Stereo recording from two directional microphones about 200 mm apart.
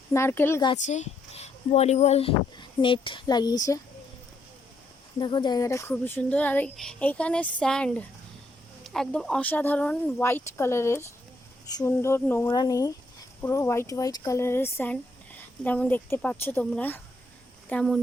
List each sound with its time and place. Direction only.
0.1 s speech: 10° left (ahead or behind)
0.9 s a child's voice: 35° left (ahead or behind)
5.2 s speech: 20° left (ahead or behind); by 18.0 s 5° left (ahead or behind)